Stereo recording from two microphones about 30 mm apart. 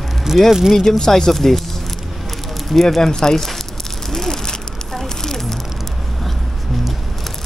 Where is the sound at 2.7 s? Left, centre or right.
Centre.